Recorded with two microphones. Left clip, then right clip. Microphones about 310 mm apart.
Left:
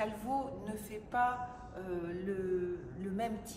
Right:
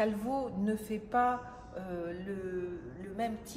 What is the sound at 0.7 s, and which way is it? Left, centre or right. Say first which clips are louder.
A woman's voice: right 7 dB; right.